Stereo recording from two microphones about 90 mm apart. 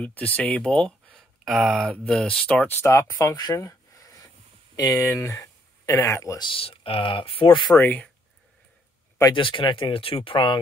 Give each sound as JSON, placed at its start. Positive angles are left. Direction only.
{"t": 0.0, "sound": "speech", "side_deg": 15}
{"t": 1.4, "sound": "speech", "side_deg": 0}
{"t": 1.9, "sound": "speech", "side_deg": 10}
{"t": 2.8, "sound": "speech", "side_deg": 35}
{"t": 6.4, "sound": "speech", "side_deg": 85}
{"t": 7.7, "sound": "speech", "side_deg": 20}
{"t": 9.3, "sound": "speech", "side_deg": 70}